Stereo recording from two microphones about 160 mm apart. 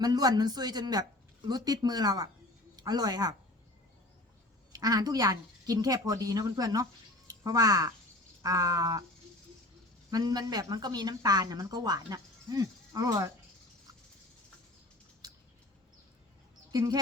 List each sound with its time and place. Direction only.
0.0 s speech: 25° right (ahead or behind)
4.7 s speech: 25° right (ahead or behind)
10.1 s speech: 25° right (ahead or behind)
16.7 s speech: 25° right (ahead or behind)